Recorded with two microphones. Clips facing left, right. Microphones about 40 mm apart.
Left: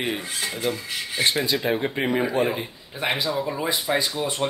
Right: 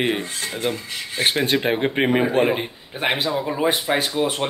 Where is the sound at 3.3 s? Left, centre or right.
Right.